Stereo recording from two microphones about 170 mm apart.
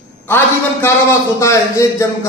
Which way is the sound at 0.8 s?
15° left (ahead or behind).